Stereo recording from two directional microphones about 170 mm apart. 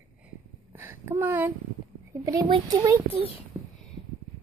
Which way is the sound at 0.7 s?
15° right (ahead or behind).